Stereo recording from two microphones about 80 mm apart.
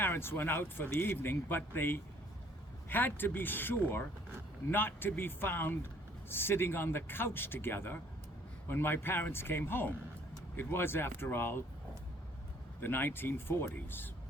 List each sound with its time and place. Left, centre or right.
0.0 s speech: left
12.8 s speech: left